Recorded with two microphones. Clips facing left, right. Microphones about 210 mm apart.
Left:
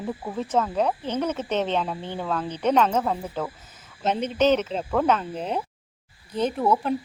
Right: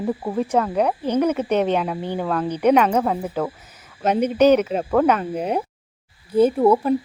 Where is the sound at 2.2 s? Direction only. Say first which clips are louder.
Right 4 dB; 55° right (ahead or behind).